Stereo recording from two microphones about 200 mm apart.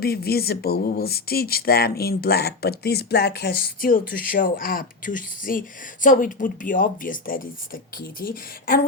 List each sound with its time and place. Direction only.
0.0 s speech: 50° left (ahead or behind)